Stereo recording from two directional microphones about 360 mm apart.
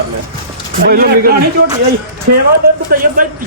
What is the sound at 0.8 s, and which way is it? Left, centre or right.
Speech, right.